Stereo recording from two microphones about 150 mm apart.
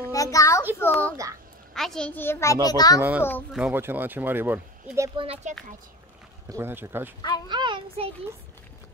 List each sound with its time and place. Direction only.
0.1 s a child's voice: 20° left (ahead or behind)
3.0 s speech: 10° right (ahead or behind)
5.1 s speech: 40° right (ahead or behind)
6.5 s speech: 15° right (ahead or behind)
7.2 s speech: 30° left (ahead or behind)
7.4 s speech: 30° right (ahead or behind)